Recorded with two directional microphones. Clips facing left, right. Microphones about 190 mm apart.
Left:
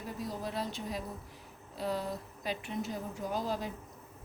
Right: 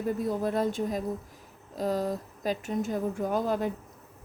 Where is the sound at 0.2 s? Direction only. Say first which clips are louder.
Right 9 dB; 50° right (ahead or behind).